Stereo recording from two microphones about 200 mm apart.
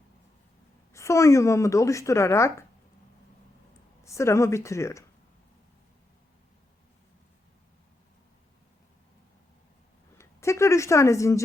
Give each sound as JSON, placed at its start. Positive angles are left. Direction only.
{"t": 0.9, "sound": "speech", "side_deg": 15}
{"t": 4.0, "sound": "speech", "side_deg": 15}
{"t": 10.2, "sound": "a woman's voice", "side_deg": 15}